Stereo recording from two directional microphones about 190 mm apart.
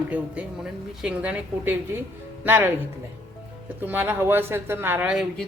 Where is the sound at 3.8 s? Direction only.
10° right (ahead or behind).